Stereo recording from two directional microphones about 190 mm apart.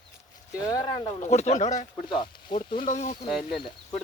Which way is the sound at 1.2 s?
35° left (ahead or behind).